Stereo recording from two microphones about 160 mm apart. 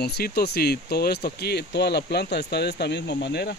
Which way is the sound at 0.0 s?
80° left.